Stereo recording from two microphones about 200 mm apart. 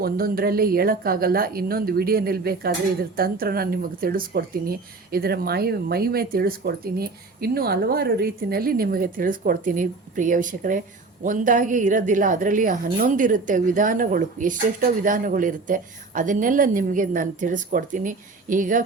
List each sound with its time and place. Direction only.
0.0 s a woman's voice: 50° right (ahead or behind)